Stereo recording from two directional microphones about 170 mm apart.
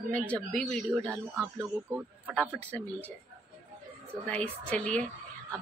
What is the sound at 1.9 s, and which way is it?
Speech, 10° right (ahead or behind).